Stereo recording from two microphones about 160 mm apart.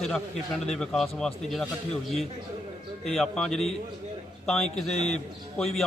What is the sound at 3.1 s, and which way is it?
Speech, centre (ahead or behind).